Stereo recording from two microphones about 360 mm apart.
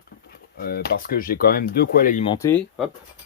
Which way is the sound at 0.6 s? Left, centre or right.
Left.